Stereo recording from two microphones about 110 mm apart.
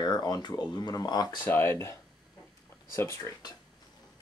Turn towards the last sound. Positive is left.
turn(degrees=25)  # may be behind; listen again after turning